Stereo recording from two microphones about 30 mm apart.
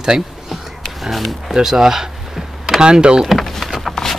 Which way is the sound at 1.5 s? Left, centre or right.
Centre.